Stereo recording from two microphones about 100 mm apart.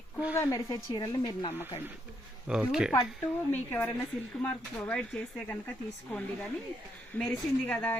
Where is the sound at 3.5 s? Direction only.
20° left (ahead or behind).